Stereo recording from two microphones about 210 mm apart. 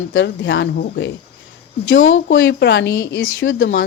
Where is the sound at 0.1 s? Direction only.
60° left (ahead or behind).